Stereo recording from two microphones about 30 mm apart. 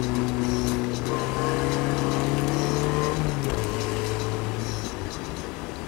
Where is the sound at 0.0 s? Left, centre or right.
Centre.